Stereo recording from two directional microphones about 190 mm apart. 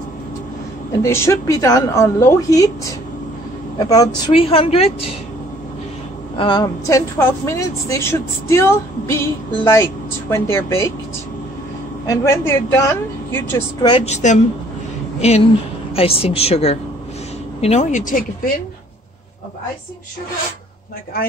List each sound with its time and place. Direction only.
1.0 s a woman's voice: 15° left (ahead or behind); by 4.9 s 30° left (ahead or behind)
6.3 s a woman's voice: 25° left (ahead or behind)
12.1 s a woman's voice: 15° left (ahead or behind)
13.8 s speech: 30° left (ahead or behind)